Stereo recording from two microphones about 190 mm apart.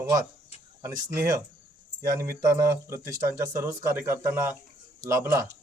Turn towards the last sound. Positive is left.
turn(degrees=-10)  # may be behind; listen again after turning